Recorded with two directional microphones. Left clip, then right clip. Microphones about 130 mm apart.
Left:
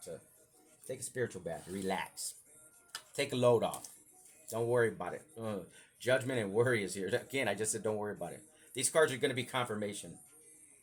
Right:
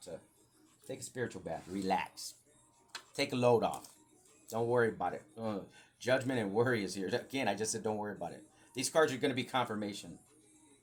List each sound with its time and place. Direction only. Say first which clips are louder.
0.9 s speech: left 2 dB; 45° left (ahead or behind); by 10.1 s 60° left (ahead or behind)